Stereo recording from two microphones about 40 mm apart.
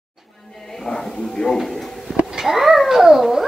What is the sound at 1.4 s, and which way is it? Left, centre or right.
Speech, left.